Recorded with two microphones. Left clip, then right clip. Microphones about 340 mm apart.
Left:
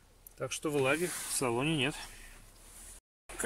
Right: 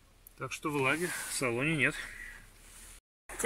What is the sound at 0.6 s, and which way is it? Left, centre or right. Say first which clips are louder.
Speech: left 1 dB; left.